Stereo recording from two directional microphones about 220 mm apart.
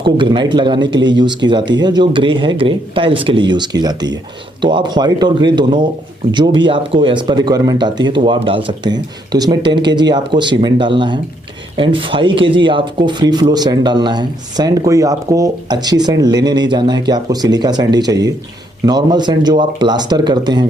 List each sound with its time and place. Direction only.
0.0 s speech: 20° right (ahead or behind)